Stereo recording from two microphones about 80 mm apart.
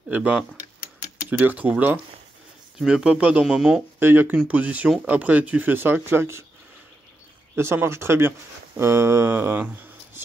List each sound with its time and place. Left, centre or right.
0.1 s speech: right
2.8 s speech: centre
3.4 s speech: centre
4.0 s speech: right
7.5 s speech: right